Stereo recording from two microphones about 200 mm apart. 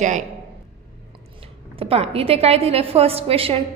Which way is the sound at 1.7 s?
30° right (ahead or behind).